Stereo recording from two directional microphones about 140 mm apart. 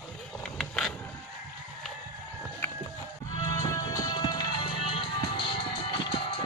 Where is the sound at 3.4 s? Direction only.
25° left (ahead or behind).